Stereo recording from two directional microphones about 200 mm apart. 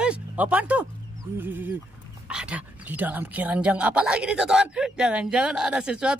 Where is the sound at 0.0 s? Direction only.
5° right (ahead or behind).